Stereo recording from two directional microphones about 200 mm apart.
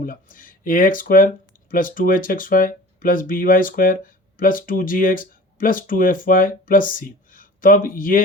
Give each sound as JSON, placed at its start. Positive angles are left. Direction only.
{"t": 0.0, "sound": "speech", "side_deg": 45}